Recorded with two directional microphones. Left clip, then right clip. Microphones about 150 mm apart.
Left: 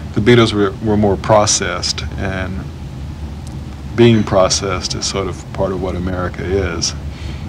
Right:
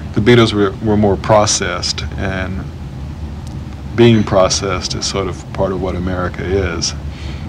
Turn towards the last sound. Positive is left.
turn(degrees=35)  # may be behind; listen again after turning